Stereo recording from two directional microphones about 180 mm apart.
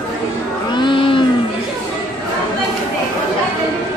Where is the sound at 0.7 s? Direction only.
25° left (ahead or behind).